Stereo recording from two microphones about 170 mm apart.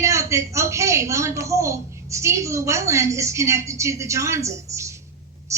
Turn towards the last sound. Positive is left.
turn(degrees=-15)  # may be behind; listen again after turning